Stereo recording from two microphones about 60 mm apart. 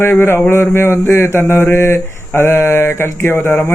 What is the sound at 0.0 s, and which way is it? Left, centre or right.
Speech, left.